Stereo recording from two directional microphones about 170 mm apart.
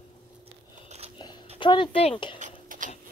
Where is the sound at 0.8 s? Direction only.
40° right (ahead or behind).